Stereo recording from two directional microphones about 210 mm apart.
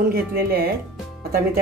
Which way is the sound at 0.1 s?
45° right (ahead or behind).